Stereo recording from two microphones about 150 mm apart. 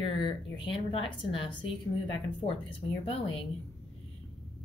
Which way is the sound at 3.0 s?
40° left (ahead or behind).